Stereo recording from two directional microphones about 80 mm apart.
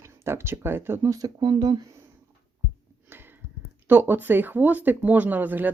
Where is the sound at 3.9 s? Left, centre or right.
Right.